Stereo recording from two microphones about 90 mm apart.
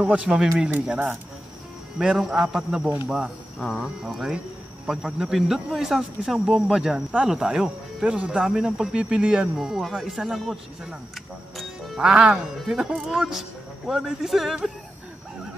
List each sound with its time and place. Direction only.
0.0 s speech: 10° right (ahead or behind)
2.0 s speech: 5° right (ahead or behind)